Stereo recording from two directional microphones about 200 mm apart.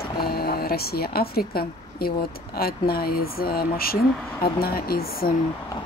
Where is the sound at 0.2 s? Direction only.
50° left (ahead or behind).